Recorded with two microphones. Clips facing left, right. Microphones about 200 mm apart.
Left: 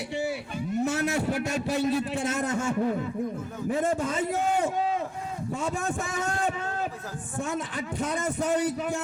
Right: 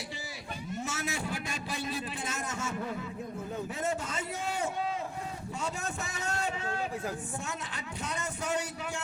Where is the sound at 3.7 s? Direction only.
55° left (ahead or behind).